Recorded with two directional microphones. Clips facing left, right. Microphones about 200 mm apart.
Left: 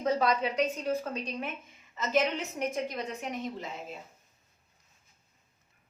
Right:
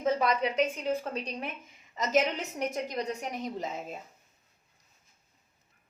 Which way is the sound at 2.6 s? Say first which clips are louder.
Right 1 dB; 40° right (ahead or behind).